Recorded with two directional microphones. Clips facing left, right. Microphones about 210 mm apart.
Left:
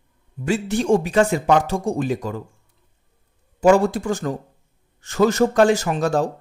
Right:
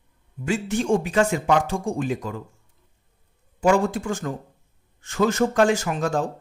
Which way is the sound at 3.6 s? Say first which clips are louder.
Left 4 dB; 40° left (ahead or behind).